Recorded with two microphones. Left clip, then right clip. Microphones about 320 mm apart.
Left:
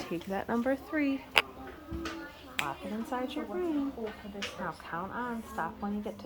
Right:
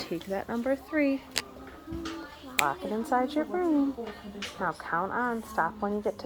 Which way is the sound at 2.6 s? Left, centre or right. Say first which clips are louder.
Right 7 dB; right.